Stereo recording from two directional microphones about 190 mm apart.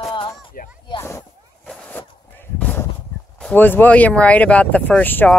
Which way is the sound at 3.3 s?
5° left (ahead or behind).